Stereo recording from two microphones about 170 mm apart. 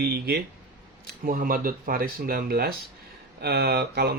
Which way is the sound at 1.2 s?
55° right (ahead or behind).